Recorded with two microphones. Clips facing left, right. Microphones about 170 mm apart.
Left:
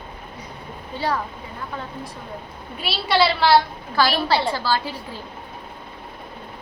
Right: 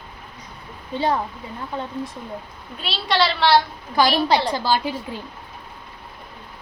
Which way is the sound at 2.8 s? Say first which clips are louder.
Left 2 dB; 5° left (ahead or behind).